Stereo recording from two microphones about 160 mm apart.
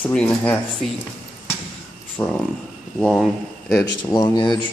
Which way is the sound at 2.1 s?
10° left (ahead or behind).